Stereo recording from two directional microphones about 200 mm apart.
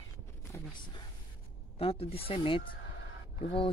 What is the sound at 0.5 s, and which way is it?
Speech, 20° left (ahead or behind).